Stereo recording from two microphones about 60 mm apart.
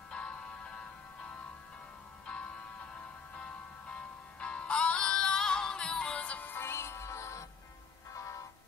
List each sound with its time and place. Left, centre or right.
0.1 s music: centre
2.2 s music: centre
6.5 s music: left